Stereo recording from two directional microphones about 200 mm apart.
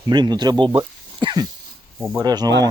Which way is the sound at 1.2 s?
25° right (ahead or behind).